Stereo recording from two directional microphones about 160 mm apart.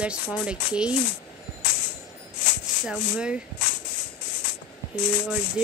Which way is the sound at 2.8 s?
5° right (ahead or behind).